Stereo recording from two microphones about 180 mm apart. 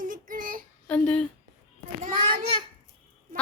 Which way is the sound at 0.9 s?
5° left (ahead or behind).